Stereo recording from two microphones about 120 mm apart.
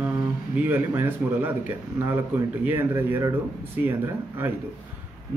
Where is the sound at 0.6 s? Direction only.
15° right (ahead or behind).